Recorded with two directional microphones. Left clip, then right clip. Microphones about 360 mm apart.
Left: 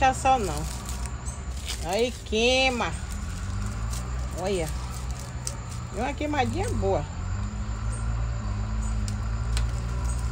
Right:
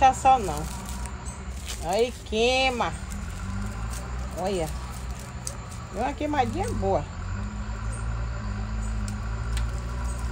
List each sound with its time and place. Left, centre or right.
0.0 s speech: centre
1.7 s speech: centre
4.4 s speech: centre
5.9 s speech: centre